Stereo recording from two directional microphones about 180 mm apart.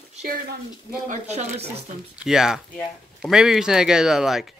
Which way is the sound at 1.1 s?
40° right (ahead or behind).